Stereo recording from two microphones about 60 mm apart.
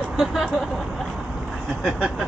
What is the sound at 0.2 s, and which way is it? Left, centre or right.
Speech, centre.